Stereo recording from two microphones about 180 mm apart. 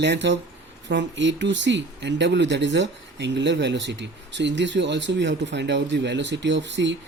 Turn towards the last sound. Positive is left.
turn(degrees=-80)